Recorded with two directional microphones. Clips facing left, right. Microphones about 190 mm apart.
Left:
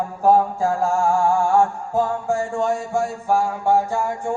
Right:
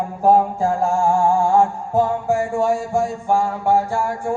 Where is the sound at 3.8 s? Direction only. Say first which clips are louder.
Right 1 dB; 20° left (ahead or behind).